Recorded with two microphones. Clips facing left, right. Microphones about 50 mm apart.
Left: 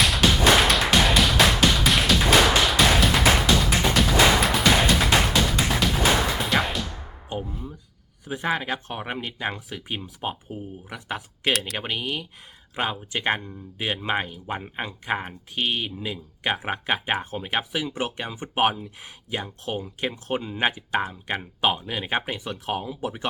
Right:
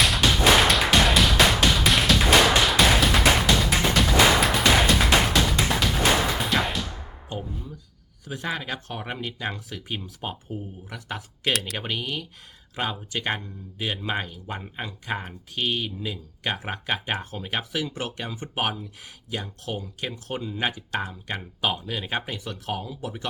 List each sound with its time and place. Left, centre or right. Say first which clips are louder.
0.0 s music: left 1 dB; centre
7.3 s music: left 2 dB; centre
8.2 s speech: left 4 dB; left